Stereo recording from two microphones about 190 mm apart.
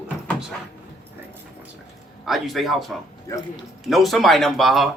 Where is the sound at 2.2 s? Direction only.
Centre (ahead or behind).